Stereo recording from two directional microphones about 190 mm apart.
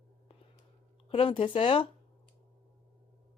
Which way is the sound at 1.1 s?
30° left (ahead or behind).